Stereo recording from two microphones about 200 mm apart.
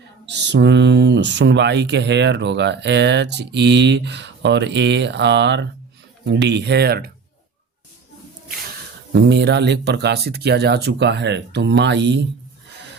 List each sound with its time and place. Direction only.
0.3 s speech: 60° right (ahead or behind)
9.1 s speech: 55° right (ahead or behind)